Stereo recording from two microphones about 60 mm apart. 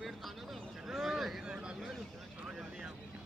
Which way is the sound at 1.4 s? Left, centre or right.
Centre.